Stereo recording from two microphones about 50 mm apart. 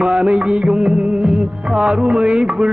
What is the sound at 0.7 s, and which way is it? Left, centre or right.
Music of bollywood, centre.